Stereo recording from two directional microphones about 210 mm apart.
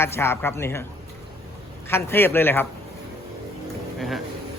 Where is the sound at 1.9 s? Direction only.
10° left (ahead or behind).